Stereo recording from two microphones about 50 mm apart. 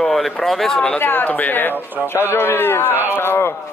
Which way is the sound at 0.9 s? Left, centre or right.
Left.